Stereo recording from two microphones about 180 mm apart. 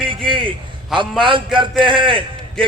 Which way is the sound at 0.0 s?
30° right (ahead or behind).